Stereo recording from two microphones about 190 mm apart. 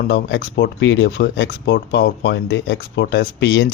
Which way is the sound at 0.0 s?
65° left (ahead or behind).